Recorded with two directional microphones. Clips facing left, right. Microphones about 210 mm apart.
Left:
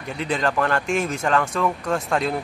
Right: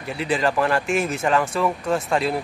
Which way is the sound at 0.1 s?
5° right (ahead or behind).